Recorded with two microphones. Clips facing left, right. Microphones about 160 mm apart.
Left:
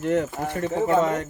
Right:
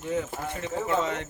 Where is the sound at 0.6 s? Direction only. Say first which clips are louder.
Left 7 dB; 50° left (ahead or behind).